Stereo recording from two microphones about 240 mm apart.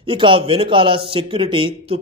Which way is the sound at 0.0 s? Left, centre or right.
Right.